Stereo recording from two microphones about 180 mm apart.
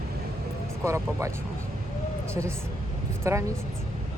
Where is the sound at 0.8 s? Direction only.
15° right (ahead or behind).